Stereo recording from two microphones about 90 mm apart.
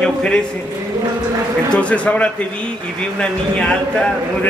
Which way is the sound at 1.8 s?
15° left (ahead or behind).